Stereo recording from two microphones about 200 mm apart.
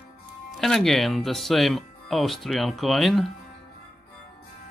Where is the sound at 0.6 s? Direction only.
Centre (ahead or behind).